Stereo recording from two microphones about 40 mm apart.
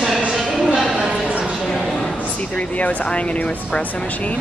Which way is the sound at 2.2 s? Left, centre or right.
Left.